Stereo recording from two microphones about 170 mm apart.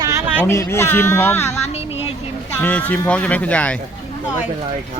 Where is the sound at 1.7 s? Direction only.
35° left (ahead or behind).